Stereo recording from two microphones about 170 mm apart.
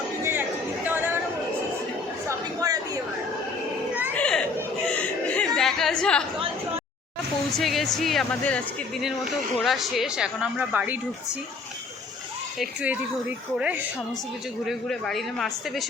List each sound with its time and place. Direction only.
0.2 s chatter: 15° right (ahead or behind)
2.6 s a sound: 20° right (ahead or behind)
4.1 s chatter: 5° left (ahead or behind)
4.9 s a sound: 5° left (ahead or behind)
7.6 s speech: centre (ahead or behind)
12.5 s speech: 10° right (ahead or behind)
14.7 s speech: centre (ahead or behind)